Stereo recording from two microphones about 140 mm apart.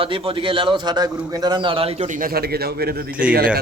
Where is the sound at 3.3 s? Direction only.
90° right.